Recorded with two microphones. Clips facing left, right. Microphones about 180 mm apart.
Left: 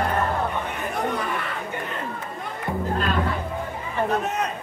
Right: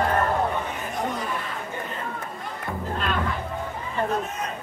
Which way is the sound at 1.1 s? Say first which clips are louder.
Left 2 dB; 60° left (ahead or behind).